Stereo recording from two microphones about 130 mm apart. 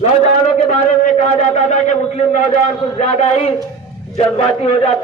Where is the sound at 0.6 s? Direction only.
70° left (ahead or behind).